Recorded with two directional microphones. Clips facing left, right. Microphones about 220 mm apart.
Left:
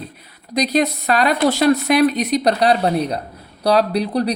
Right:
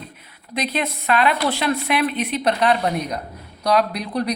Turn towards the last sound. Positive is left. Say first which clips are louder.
# left 5 dB
turn(degrees=35)  # may be behind; listen again after turning